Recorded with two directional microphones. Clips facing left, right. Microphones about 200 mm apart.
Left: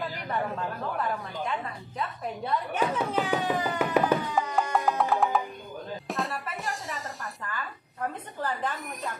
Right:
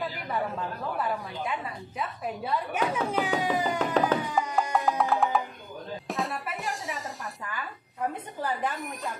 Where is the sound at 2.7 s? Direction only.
10° right (ahead or behind).